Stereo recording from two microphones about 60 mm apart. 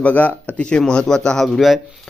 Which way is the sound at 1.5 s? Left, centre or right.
Centre.